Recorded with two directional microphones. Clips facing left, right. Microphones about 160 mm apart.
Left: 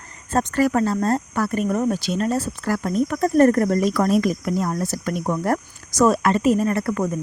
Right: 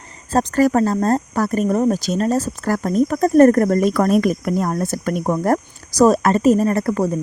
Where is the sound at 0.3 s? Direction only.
40° right (ahead or behind).